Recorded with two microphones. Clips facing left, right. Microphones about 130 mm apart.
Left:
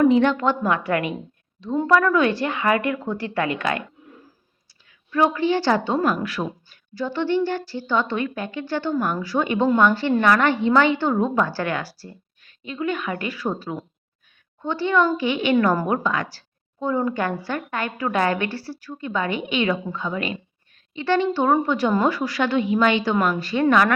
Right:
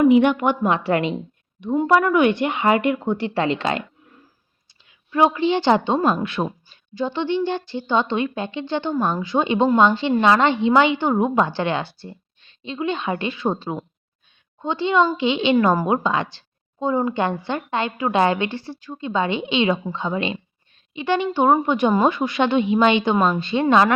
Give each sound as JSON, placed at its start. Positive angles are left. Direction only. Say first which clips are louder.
{"t": 0.0, "sound": "a woman's voice", "louder": "right 2 dB", "side_deg": -15}
{"t": 4.9, "sound": "a woman's voice", "louder": "right 2 dB", "side_deg": -20}